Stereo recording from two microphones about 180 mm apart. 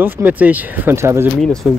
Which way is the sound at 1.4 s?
Centre (ahead or behind).